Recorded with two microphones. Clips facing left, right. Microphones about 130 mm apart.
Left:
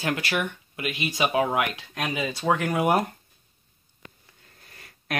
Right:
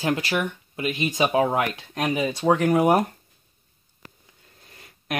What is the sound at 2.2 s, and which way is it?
Speech, 15° right (ahead or behind).